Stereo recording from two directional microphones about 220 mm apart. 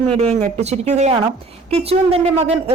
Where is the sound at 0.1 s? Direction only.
30° right (ahead or behind).